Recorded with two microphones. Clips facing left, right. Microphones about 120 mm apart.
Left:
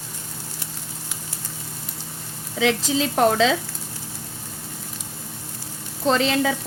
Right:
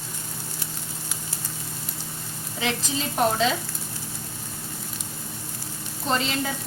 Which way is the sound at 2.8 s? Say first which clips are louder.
Left 3 dB; 90° left.